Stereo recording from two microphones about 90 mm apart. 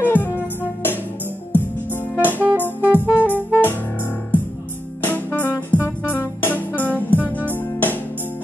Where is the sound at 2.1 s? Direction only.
20° left (ahead or behind).